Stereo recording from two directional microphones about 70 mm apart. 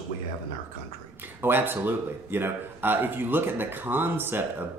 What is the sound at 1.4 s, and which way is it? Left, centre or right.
Speech, right.